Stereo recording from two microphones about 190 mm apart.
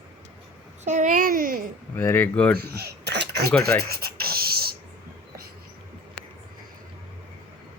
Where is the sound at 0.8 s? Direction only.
40° right (ahead or behind).